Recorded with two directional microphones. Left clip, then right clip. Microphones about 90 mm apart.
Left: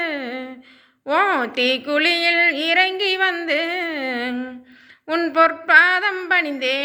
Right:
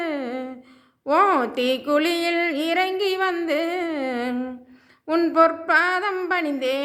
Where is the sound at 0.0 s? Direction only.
35° right (ahead or behind).